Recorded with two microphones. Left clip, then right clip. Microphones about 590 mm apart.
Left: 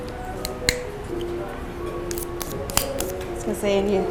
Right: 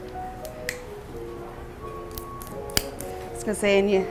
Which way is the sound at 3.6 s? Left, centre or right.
Right.